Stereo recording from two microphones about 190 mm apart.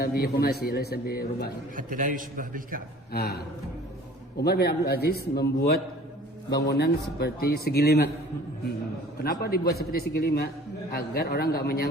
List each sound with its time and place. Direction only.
0.0 s a man's voice: 55° left (ahead or behind)
1.7 s a man's voice: 45° right (ahead or behind)
3.1 s a man's voice: 55° left (ahead or behind)
9.4 s a man's voice: 55° left (ahead or behind)